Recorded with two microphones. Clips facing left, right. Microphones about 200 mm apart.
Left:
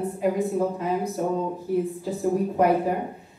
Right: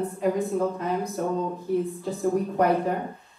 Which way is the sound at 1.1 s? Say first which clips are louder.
Left 1 dB; 10° left (ahead or behind).